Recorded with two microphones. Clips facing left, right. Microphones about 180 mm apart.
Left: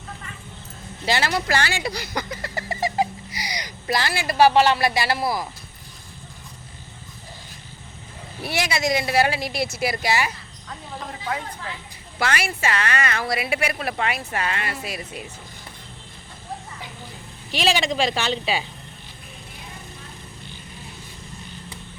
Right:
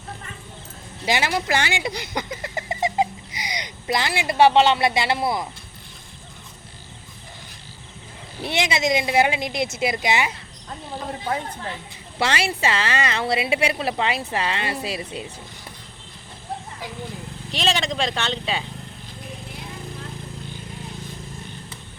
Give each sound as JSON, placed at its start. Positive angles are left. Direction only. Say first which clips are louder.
{"t": 1.0, "sound": "speech", "louder": "even", "side_deg": -15}
{"t": 8.4, "sound": "a woman's voice", "louder": "right 2 dB", "side_deg": -25}
{"t": 12.2, "sound": "a woman's voice", "louder": "right 2 dB", "side_deg": -25}
{"t": 17.5, "sound": "speech", "louder": "left 2 dB", "side_deg": 5}